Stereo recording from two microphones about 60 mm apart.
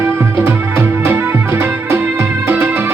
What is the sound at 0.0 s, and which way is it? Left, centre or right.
Music, right.